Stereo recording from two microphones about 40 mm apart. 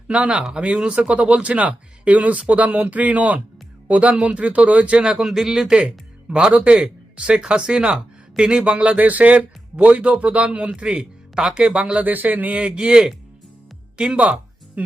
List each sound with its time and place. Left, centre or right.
0.1 s speech: right
5.1 s speech: centre
5.7 s speech: right
10.8 s speech: centre
12.0 s a man's voice: right
12.7 s speech: right
14.8 s speech: right